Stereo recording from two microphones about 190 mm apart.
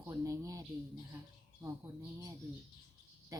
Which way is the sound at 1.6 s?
15° right (ahead or behind).